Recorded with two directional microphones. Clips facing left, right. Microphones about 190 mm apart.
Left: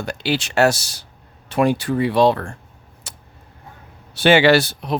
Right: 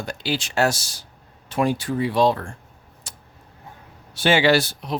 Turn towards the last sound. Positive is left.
turn(degrees=65)  # may be behind; listen again after turning